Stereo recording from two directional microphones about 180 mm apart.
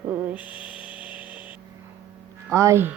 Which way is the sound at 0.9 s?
10° right (ahead or behind).